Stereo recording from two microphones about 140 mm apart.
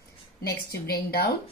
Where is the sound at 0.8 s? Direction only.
90° left.